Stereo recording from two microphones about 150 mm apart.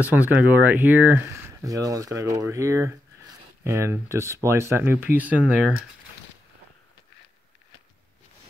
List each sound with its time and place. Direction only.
0.0 s speech: 10° right (ahead or behind)